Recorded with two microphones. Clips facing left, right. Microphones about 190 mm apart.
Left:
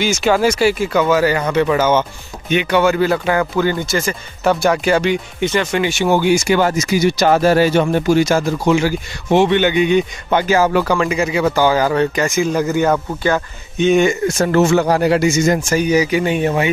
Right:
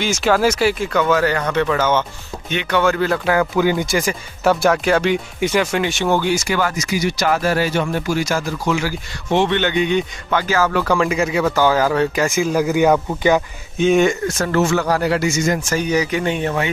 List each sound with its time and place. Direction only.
0.0 s speech: centre (ahead or behind)
3.6 s speech: 10° right (ahead or behind); by 6.4 s 15° left (ahead or behind)
6.5 s speech: 25° left (ahead or behind)
9.3 s speech: 10° left (ahead or behind)
10.9 s speech: centre (ahead or behind)
13.7 s speech: centre (ahead or behind)
14.4 s speech: 25° left (ahead or behind)
15.7 s speech: 10° left (ahead or behind)